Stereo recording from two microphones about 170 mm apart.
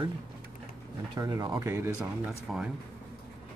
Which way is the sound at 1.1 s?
20° right (ahead or behind).